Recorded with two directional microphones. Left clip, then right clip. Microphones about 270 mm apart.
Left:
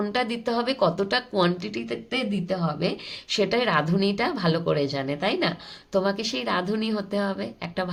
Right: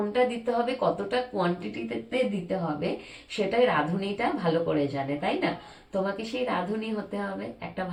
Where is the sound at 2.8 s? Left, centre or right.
Left.